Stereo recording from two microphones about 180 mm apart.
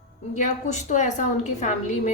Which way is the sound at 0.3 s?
45° left (ahead or behind).